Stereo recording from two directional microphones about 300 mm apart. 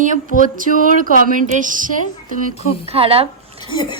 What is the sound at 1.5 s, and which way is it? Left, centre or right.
A woman's voice, right.